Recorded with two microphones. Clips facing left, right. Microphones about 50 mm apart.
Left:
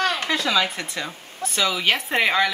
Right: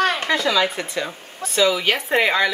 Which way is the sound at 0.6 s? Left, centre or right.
Centre.